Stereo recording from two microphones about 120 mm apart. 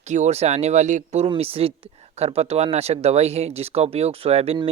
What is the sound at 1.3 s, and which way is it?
Speech, 55° right (ahead or behind).